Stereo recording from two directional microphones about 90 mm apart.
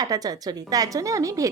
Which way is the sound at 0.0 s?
45° right (ahead or behind).